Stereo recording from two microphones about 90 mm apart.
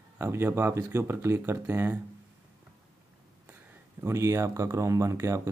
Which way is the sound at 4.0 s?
30° right (ahead or behind).